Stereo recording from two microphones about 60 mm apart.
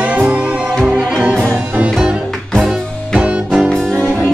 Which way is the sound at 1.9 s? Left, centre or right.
Centre.